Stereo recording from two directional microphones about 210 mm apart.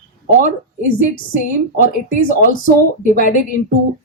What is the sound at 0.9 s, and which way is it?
Speech, 40° left (ahead or behind).